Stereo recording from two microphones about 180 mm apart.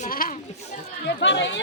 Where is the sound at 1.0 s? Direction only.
80° left.